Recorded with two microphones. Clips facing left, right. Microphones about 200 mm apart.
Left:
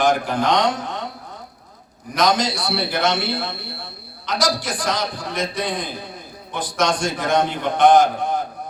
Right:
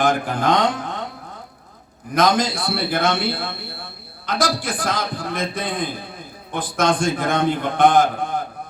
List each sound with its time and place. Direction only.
0.0 s a man's voice: 55° right (ahead or behind)
2.1 s a man's voice: 55° right (ahead or behind)